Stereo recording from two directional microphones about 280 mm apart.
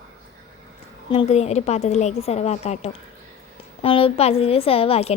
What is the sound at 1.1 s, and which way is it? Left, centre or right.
A woman's voice, left.